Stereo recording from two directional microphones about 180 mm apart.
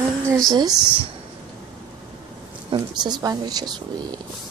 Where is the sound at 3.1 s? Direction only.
20° right (ahead or behind).